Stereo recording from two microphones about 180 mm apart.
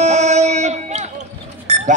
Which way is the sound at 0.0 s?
40° right (ahead or behind).